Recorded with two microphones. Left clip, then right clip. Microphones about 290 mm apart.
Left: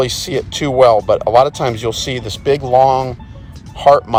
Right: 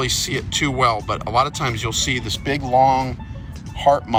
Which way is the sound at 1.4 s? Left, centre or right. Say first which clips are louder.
Left 7 dB; centre.